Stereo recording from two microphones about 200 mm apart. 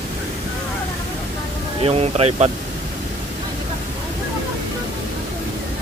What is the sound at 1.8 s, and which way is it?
Speech, 30° right (ahead or behind).